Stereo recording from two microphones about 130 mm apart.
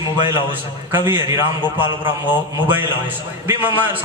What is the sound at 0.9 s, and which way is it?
Speech, 15° right (ahead or behind).